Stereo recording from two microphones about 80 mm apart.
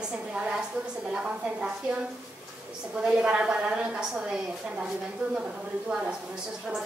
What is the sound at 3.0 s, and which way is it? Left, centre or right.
A woman's voice, centre.